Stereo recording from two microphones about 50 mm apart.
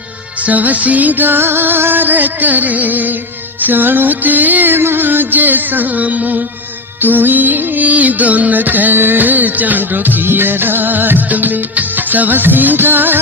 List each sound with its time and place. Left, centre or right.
0.4 s music: right